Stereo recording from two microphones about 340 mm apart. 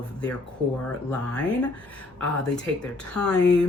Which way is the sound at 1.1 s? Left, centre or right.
Centre.